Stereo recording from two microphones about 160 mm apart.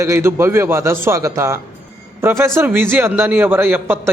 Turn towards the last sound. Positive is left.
turn(degrees=-15)  # may be behind; listen again after turning